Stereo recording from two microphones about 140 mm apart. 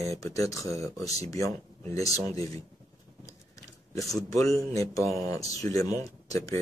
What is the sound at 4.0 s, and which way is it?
Speech, 25° left (ahead or behind).